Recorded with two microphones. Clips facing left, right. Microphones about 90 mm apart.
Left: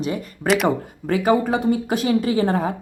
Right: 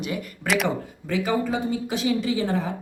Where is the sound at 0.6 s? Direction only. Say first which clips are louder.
Left 6 dB; 50° left (ahead or behind).